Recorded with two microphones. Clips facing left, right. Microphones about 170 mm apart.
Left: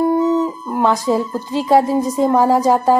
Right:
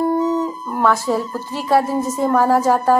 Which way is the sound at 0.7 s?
15° left (ahead or behind).